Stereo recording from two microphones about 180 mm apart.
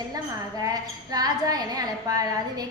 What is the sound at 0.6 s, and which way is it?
A woman's voice, 20° right (ahead or behind).